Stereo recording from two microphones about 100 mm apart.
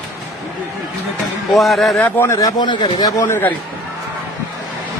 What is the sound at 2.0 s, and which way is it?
Speech, 20° left (ahead or behind).